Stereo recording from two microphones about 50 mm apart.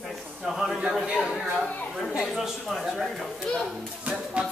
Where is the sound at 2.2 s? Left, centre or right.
Centre.